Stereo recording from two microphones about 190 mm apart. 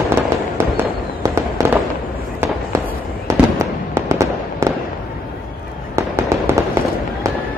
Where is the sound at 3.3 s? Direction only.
15° right (ahead or behind).